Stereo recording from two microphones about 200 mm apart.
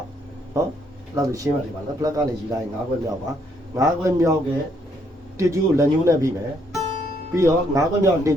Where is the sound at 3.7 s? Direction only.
15° right (ahead or behind).